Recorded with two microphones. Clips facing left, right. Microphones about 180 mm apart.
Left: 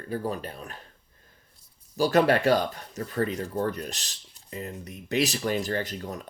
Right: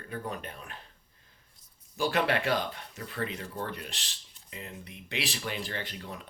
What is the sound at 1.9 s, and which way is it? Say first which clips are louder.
Speech: left 7 dB; 40° left (ahead or behind).